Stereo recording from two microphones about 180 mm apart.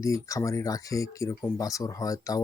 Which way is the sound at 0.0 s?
15° left (ahead or behind).